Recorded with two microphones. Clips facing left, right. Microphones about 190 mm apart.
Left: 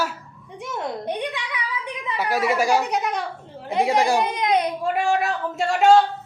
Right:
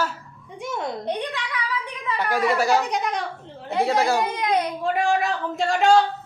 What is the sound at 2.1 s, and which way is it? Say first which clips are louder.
Speech: even; 10° left (ahead or behind).